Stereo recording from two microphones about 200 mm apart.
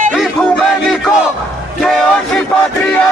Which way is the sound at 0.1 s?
Centre (ahead or behind).